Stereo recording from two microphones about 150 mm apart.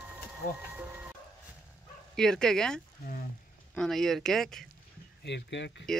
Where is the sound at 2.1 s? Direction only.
5° left (ahead or behind).